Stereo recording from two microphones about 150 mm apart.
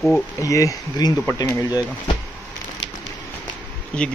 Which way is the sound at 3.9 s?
5° left (ahead or behind).